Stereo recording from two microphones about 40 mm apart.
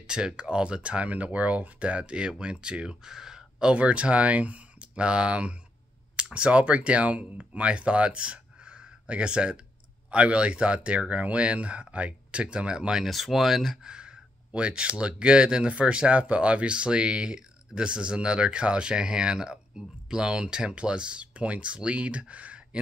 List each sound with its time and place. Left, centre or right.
0.0 s speech: centre
3.7 s speech: right
13.0 s speech: centre
13.8 s speech: right